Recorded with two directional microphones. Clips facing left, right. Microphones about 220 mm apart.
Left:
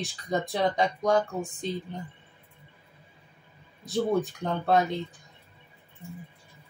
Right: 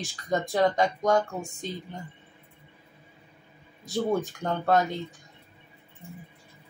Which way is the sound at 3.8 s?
Centre (ahead or behind).